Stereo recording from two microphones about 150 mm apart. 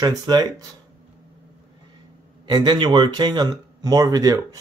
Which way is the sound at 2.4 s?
30° right (ahead or behind).